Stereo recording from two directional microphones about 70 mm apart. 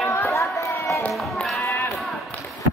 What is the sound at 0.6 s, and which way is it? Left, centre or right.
Run, left.